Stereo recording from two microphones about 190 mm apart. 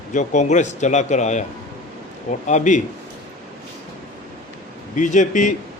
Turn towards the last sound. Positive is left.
turn(degrees=40)  # may be behind; listen again after turning